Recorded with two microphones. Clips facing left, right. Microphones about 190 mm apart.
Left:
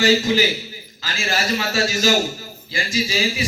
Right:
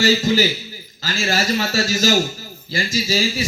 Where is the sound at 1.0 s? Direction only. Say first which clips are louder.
Right 3 dB; 40° right (ahead or behind).